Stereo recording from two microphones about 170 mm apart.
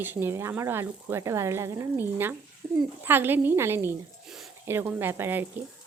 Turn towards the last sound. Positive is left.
turn(degrees=-10)  # may be behind; listen again after turning